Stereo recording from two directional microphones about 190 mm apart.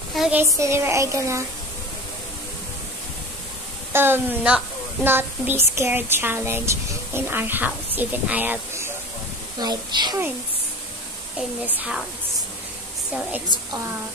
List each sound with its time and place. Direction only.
0.1 s speech: 5° right (ahead or behind)
3.9 s speech: 10° right (ahead or behind)
9.6 s a woman's voice: 20° right (ahead or behind)
11.6 s speech: 10° right (ahead or behind)